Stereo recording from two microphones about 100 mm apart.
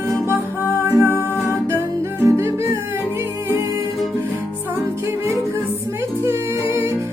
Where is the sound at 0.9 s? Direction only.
25° right (ahead or behind).